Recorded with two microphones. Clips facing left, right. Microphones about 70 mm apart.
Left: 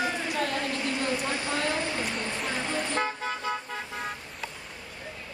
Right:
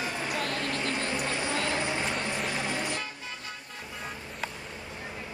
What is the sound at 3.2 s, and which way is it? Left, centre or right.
Car, left.